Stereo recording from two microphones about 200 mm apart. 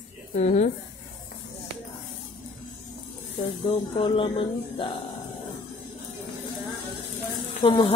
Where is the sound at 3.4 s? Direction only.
25° left (ahead or behind).